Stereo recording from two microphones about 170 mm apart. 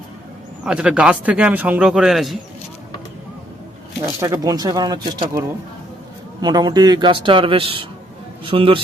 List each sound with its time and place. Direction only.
0.6 s a man's voice: 5° right (ahead or behind)
4.0 s a man's voice: 20° right (ahead or behind)